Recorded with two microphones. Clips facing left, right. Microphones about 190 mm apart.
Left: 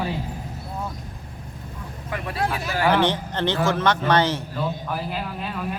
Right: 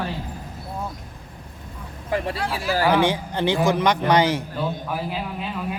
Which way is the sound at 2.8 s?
10° right (ahead or behind).